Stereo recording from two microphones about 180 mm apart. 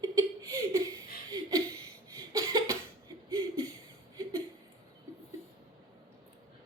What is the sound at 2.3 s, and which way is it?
Cough, 20° right (ahead or behind).